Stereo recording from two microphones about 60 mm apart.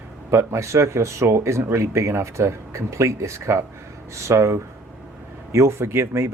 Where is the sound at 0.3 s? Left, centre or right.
Right.